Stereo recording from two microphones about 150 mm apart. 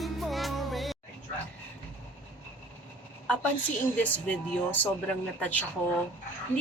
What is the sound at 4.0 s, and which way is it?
Speech, 10° left (ahead or behind).